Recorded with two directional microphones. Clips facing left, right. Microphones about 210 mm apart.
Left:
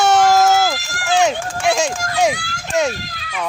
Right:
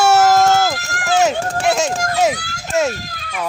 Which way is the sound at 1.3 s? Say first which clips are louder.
Right 4 dB; 40° right (ahead or behind).